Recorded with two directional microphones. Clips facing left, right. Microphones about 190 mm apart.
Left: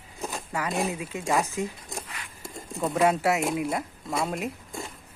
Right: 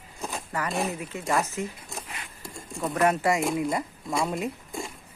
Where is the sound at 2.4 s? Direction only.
25° left (ahead or behind).